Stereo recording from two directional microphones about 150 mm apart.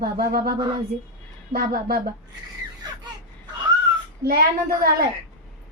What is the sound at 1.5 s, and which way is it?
Speech, 80° right.